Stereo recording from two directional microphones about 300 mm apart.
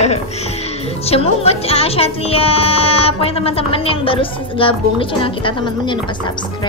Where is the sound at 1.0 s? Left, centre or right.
Centre.